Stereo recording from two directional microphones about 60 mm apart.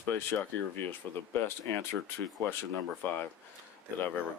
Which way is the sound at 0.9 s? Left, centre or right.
Left.